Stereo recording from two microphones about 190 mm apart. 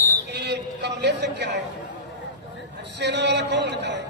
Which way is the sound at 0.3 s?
60° right (ahead or behind).